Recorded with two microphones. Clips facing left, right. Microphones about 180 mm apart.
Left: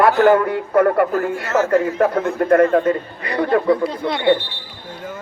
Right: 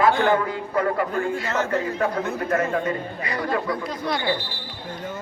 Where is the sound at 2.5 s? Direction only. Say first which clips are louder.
Left 10 dB; 55° left (ahead or behind).